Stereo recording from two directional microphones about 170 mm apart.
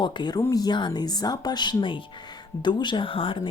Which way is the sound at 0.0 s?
25° left (ahead or behind).